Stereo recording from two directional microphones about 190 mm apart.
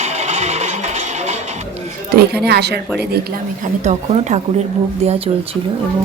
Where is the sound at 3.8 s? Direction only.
35° right (ahead or behind).